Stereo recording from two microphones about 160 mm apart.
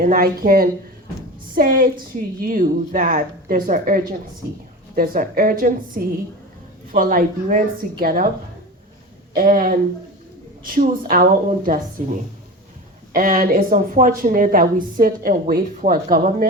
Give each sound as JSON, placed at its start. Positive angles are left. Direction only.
{"t": 0.0, "sound": "a woman's voice", "side_deg": -65}
{"t": 9.3, "sound": "a woman's voice", "side_deg": -60}
{"t": 11.1, "sound": "a woman's voice", "side_deg": -60}
{"t": 13.1, "sound": "a woman's voice", "side_deg": -60}